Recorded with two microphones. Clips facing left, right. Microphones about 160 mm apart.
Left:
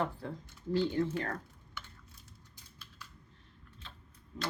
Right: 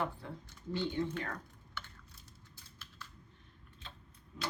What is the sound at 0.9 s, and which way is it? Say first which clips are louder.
Speech: left 4 dB; 5° left (ahead or behind).